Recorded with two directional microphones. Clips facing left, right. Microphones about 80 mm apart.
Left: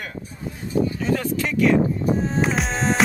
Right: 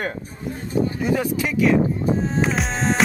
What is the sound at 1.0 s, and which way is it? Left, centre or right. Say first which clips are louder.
Speech: right 1 dB; centre.